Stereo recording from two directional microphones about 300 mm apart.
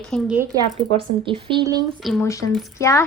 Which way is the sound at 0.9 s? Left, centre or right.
Centre.